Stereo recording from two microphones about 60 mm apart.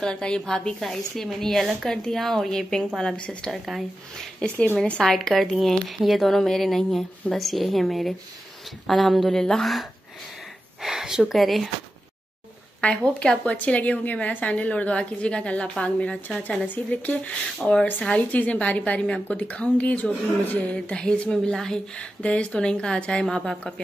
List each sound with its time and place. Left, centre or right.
0.0 s speech: centre
3.5 s speech: centre
10.8 s speech: centre
12.8 s a woman's voice: centre
16.6 s a woman's voice: left
17.6 s speech: centre
18.0 s a woman's voice: left